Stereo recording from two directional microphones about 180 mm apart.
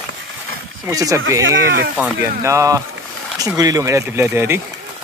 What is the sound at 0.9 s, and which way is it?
Speech, 20° right (ahead or behind).